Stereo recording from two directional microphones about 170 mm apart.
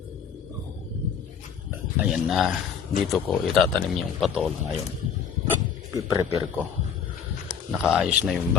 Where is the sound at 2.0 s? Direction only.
Centre (ahead or behind).